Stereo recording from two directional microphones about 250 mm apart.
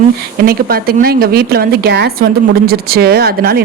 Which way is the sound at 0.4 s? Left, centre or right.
Right.